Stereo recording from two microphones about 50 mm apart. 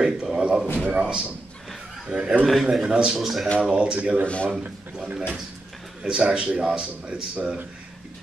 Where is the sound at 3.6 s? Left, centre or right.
Right.